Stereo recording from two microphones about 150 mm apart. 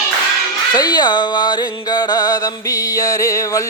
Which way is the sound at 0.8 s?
25° left (ahead or behind).